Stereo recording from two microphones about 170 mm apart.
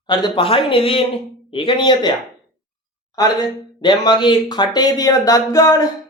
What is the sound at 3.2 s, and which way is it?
Speech, 25° left (ahead or behind).